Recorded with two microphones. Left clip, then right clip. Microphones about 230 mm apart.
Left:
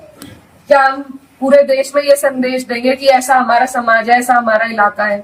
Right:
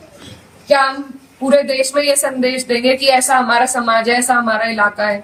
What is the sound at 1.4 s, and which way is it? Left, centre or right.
A woman's voice, centre.